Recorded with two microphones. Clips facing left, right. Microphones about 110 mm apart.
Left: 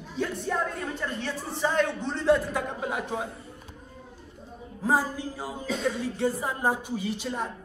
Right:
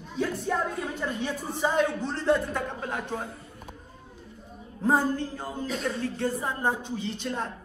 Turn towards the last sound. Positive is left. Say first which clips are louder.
# left 1 dB
turn(degrees=5)  # may be behind; listen again after turning